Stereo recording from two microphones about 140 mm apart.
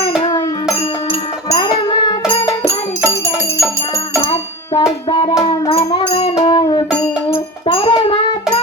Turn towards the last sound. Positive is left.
turn(degrees=40)  # may be behind; listen again after turning